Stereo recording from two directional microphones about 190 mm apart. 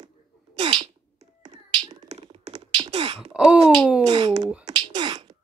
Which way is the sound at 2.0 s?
35° right (ahead or behind).